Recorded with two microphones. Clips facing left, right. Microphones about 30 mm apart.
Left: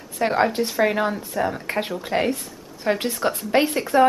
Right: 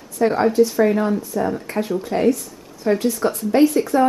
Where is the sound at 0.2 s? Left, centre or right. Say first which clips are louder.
Right 2 dB; left.